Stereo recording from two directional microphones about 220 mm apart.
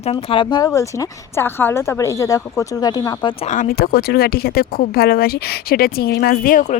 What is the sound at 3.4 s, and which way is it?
Speech, 35° left (ahead or behind).